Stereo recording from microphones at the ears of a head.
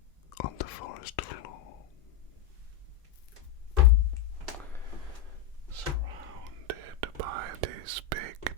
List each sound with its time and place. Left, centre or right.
0.3 s whispering: left
5.7 s whispering: right